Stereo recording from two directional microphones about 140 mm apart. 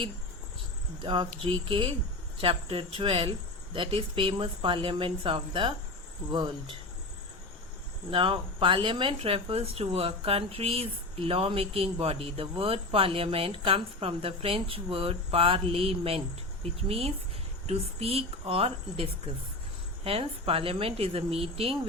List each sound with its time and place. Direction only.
1.0 s speech: 35° right (ahead or behind)
8.1 s speech: 40° right (ahead or behind)
17.7 s a woman's voice: 45° right (ahead or behind)